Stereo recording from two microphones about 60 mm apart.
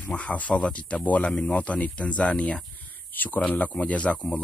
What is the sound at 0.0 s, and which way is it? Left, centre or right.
Speech, left.